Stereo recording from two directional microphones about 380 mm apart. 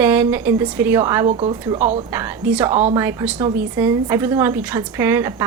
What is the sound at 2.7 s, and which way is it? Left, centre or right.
Speech, centre.